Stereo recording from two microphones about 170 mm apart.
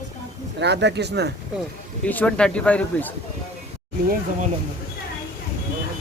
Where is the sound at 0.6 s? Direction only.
90° right.